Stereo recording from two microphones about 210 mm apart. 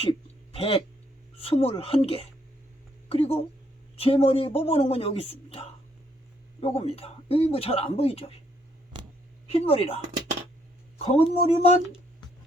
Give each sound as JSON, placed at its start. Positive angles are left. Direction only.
{"t": 0.0, "sound": "a sound", "side_deg": 25}
{"t": 1.4, "sound": "a man's voice", "side_deg": 25}
{"t": 9.5, "sound": "a man's voice", "side_deg": 25}